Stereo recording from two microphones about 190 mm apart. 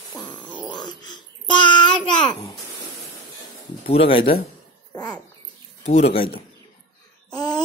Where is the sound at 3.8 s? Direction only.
30° left (ahead or behind).